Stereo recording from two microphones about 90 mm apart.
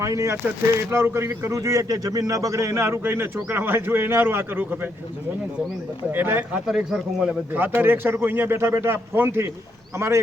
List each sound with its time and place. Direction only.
0.0 s speech: 35° right (ahead or behind)
6.1 s speech: 25° right (ahead or behind)
6.7 s speech: 5° right (ahead or behind)
7.5 s speech: 20° right (ahead or behind)